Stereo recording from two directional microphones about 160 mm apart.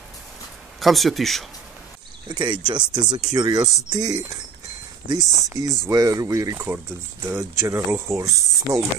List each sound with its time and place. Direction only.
0.7 s speech: centre (ahead or behind)
2.2 s speech: 30° right (ahead or behind)